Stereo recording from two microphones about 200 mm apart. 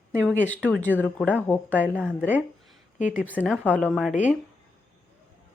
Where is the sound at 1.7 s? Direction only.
10° right (ahead or behind).